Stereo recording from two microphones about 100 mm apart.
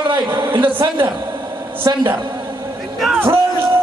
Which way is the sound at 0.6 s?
60° right (ahead or behind).